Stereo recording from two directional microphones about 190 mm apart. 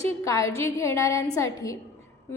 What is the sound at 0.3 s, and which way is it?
A woman's voice, 15° left (ahead or behind).